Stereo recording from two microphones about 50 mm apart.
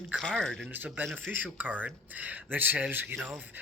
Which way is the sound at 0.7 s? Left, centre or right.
Right.